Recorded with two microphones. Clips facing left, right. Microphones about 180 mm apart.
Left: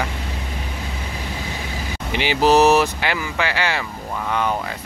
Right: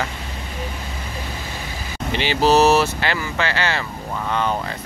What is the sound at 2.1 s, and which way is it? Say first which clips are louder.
Speech: left 1 dB; 15° left (ahead or behind).